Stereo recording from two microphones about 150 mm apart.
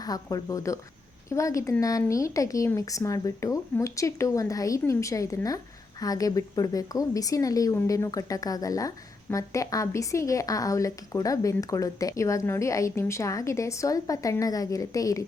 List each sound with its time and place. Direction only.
0.0 s a woman's voice: 25° left (ahead or behind)